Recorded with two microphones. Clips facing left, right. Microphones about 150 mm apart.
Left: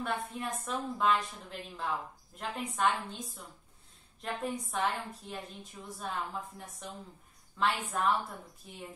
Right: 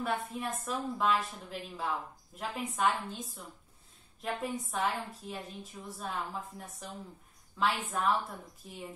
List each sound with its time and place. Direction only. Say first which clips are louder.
0.0 s a woman's voice: right 1 dB; centre (ahead or behind)